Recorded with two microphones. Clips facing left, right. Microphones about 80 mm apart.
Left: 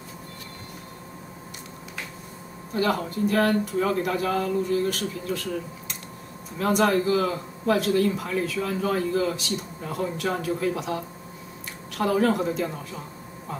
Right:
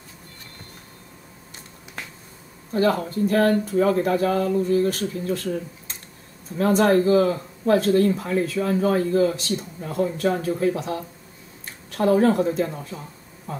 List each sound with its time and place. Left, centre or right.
2.7 s speech: right
12.0 s speech: right